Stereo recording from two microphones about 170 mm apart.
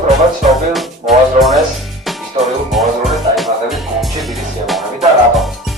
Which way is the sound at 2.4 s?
35° right (ahead or behind).